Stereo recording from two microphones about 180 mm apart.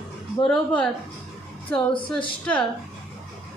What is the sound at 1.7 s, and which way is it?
Speech, 30° left (ahead or behind).